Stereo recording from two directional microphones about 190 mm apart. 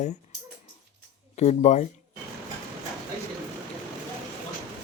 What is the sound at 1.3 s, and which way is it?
Speech, 35° left (ahead or behind).